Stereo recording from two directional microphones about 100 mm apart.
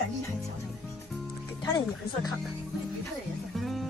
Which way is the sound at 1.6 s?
45° left (ahead or behind).